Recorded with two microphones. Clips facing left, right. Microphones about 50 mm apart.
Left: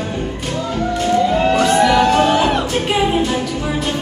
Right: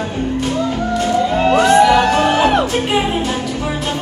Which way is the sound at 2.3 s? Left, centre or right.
Right.